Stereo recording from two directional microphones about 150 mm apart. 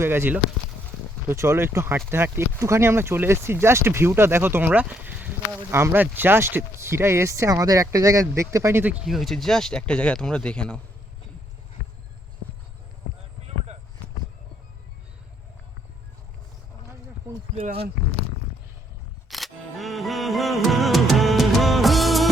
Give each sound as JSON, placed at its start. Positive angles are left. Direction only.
{"t": 0.0, "sound": "speech", "side_deg": -15}
{"t": 9.0, "sound": "speech", "side_deg": 0}
{"t": 13.4, "sound": "a sound", "side_deg": -45}
{"t": 17.5, "sound": "speech", "side_deg": -45}
{"t": 19.3, "sound": "music", "side_deg": 0}